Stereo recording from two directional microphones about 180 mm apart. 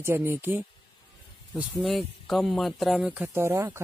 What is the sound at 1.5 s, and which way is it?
Speech, centre (ahead or behind).